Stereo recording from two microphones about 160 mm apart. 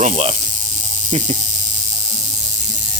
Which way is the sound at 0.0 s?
40° right (ahead or behind).